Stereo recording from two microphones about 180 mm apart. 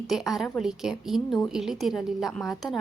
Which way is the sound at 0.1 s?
Centre (ahead or behind).